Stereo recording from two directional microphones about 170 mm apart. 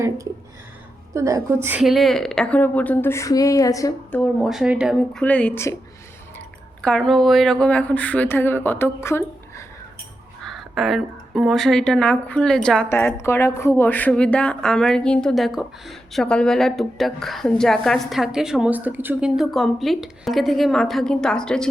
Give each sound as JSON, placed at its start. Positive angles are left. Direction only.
{"t": 1.1, "sound": "a woman's voice", "side_deg": -20}
{"t": 1.8, "sound": "speech", "side_deg": 0}
{"t": 4.2, "sound": "a woman's voice", "side_deg": 0}
{"t": 6.8, "sound": "speech", "side_deg": 5}
{"t": 10.4, "sound": "a woman's voice", "side_deg": 0}